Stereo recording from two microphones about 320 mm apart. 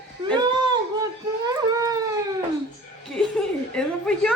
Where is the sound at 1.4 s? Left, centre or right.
Centre.